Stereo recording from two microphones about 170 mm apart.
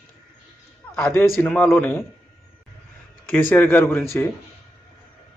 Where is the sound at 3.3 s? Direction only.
10° left (ahead or behind).